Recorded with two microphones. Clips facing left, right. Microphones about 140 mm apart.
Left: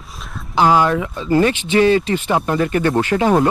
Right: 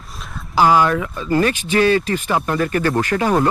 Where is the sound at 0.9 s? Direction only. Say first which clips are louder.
Left 1 dB; 30° left (ahead or behind).